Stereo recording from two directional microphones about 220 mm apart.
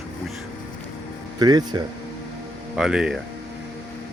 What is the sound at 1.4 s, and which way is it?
Speech, 20° right (ahead or behind).